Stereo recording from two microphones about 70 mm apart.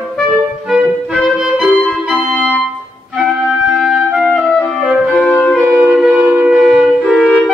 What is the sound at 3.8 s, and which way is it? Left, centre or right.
Music, centre.